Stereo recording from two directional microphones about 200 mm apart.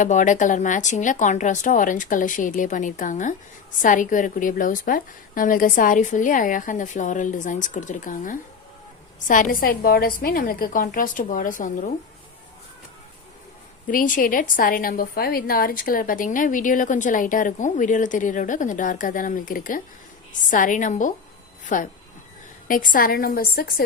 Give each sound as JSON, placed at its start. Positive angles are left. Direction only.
{"t": 0.0, "sound": "a woman's voice", "side_deg": 40}
{"t": 13.8, "sound": "a woman's voice", "side_deg": 45}